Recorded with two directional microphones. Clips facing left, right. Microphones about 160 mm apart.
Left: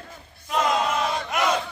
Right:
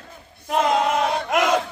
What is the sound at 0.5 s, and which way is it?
Battle cry, 55° right (ahead or behind).